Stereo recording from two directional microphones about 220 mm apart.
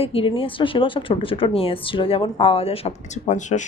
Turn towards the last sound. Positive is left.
turn(degrees=35)  # may be behind; listen again after turning